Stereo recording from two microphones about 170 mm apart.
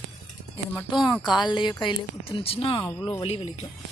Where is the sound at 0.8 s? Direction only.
25° left (ahead or behind).